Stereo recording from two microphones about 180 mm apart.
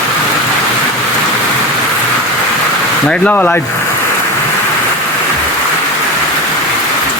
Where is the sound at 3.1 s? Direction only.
10° left (ahead or behind).